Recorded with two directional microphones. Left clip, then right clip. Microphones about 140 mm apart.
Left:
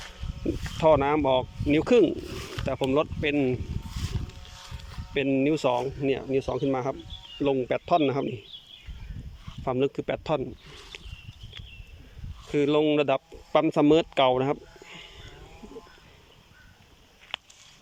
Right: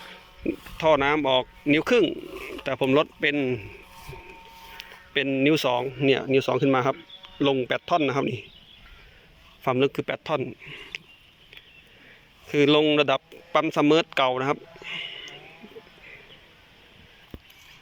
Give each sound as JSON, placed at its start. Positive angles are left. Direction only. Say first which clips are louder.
{"t": 0.8, "sound": "speech", "louder": "even", "side_deg": 5}
{"t": 2.6, "sound": "speech", "louder": "right 3 dB", "side_deg": 5}
{"t": 4.8, "sound": "speech", "louder": "right 2 dB", "side_deg": 10}
{"t": 9.6, "sound": "speech", "louder": "right 3 dB", "side_deg": 10}
{"t": 10.9, "sound": "a sound", "louder": "right 7 dB", "side_deg": 15}
{"t": 12.5, "sound": "speech", "louder": "right 3 dB", "side_deg": 5}